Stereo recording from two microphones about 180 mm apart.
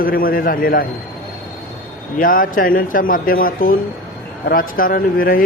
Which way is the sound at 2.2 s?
50° left (ahead or behind).